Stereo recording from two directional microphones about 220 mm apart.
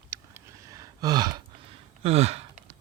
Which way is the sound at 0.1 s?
15° right (ahead or behind).